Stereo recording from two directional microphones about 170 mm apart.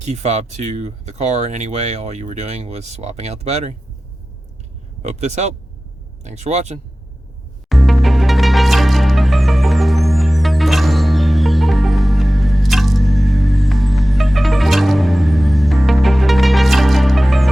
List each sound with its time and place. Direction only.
0.0 s speech: 45° right (ahead or behind)
5.0 s speech: 40° right (ahead or behind)
7.7 s music: centre (ahead or behind)